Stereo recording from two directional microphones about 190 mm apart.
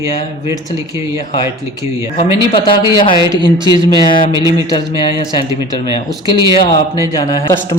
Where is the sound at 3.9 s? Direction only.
25° left (ahead or behind).